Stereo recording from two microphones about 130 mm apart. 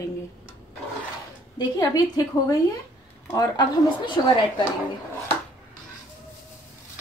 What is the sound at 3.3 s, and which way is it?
A woman's voice, 25° left (ahead or behind).